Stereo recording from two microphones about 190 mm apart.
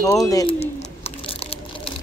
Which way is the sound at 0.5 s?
30° left (ahead or behind).